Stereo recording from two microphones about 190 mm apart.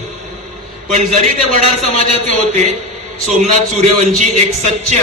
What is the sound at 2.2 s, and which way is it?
A man's voice, 40° right (ahead or behind).